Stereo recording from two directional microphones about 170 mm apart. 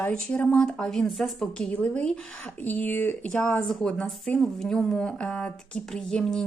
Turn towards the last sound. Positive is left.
turn(degrees=5)  # may be behind; listen again after turning